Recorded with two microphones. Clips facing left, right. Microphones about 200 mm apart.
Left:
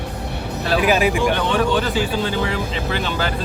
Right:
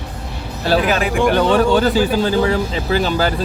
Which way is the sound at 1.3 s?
40° right (ahead or behind).